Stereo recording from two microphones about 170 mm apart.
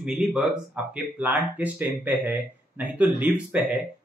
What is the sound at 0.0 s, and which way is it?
Speech, 5° right (ahead or behind).